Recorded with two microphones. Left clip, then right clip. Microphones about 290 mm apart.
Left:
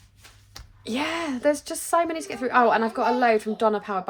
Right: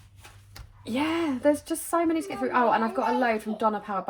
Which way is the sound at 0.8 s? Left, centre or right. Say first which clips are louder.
Even; left.